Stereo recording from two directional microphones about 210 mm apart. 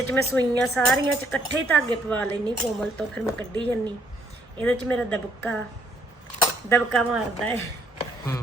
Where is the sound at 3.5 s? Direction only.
20° right (ahead or behind).